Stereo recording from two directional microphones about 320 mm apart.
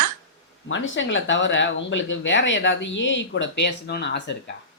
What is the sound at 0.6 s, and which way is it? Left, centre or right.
Speech, left.